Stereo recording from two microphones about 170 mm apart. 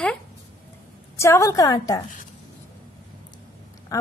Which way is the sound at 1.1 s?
15° left (ahead or behind).